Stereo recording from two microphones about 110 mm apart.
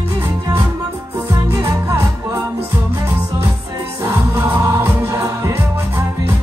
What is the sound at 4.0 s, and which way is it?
Music, 25° right (ahead or behind).